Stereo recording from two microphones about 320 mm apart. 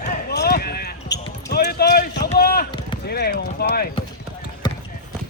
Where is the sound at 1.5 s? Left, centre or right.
Left.